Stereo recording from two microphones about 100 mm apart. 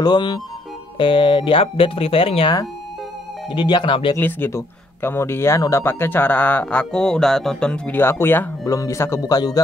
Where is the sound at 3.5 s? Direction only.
50° left (ahead or behind).